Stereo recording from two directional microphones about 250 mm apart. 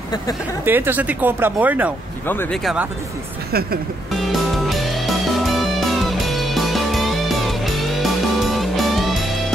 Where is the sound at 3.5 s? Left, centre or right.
Right.